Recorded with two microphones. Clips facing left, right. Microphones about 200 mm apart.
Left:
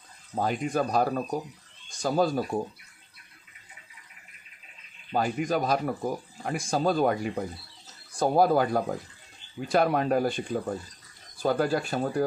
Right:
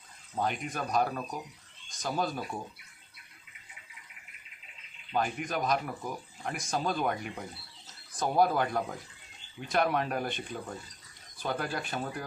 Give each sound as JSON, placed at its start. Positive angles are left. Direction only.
{"t": 0.3, "sound": "speech", "side_deg": 35}
{"t": 5.1, "sound": "speech", "side_deg": 35}
{"t": 11.4, "sound": "speech", "side_deg": 40}